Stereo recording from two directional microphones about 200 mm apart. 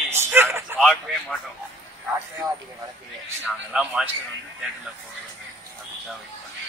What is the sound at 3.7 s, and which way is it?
Speech, 5° right (ahead or behind).